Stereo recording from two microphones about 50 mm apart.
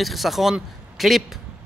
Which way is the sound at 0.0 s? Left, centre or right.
Centre.